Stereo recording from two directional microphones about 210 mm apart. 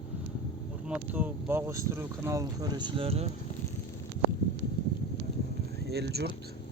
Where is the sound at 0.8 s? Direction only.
5° right (ahead or behind); by 3.2 s 25° right (ahead or behind).